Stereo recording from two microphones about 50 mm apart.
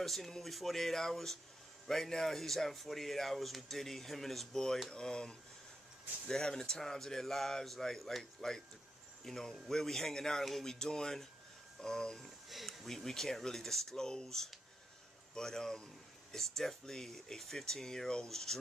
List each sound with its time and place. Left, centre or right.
0.0 s speech: centre
12.4 s speech: centre